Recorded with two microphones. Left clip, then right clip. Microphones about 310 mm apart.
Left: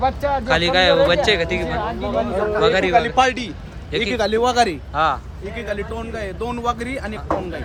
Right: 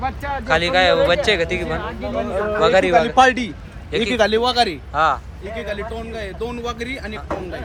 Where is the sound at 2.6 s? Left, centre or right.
Centre.